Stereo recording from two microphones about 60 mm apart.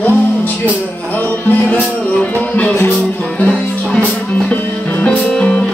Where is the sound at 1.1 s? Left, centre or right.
Left.